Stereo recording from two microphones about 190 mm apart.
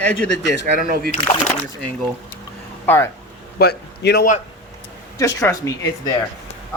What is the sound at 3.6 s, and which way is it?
Speech, 60° left (ahead or behind).